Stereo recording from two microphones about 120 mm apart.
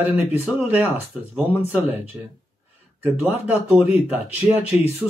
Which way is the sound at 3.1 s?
60° left (ahead or behind).